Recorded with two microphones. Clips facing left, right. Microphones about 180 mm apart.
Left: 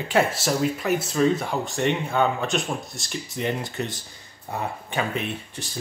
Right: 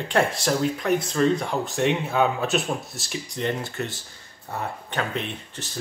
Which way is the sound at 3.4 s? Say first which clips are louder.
Even; 15° left (ahead or behind).